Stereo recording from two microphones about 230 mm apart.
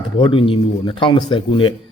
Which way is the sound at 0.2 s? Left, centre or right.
Left.